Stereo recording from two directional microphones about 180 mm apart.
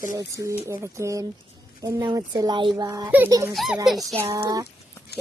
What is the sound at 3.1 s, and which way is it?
Speech, 10° right (ahead or behind).